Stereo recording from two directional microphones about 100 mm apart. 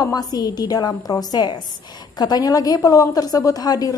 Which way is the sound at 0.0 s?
40° left (ahead or behind).